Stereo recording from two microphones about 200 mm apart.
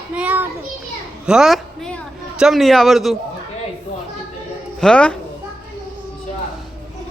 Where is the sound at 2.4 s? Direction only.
Centre (ahead or behind).